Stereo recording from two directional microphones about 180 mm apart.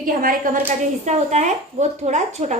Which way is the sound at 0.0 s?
50° right (ahead or behind).